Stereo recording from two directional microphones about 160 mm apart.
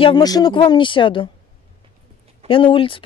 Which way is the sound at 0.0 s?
25° left (ahead or behind).